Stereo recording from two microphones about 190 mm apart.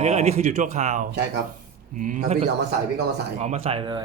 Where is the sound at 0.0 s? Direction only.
35° right (ahead or behind).